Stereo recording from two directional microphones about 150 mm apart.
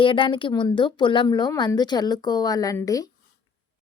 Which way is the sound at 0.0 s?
35° left (ahead or behind).